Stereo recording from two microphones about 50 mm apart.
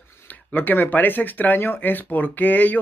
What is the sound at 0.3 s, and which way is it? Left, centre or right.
Speech, left.